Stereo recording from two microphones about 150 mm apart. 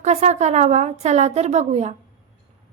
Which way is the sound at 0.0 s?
50° right (ahead or behind).